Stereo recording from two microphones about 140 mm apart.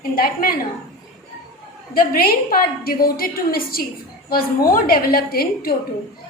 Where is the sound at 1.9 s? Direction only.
90° left.